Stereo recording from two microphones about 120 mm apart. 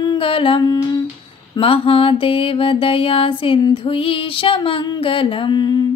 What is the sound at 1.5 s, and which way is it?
Mantra, 50° left (ahead or behind).